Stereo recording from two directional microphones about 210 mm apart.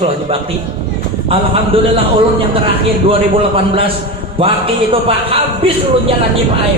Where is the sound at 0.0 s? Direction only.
25° right (ahead or behind).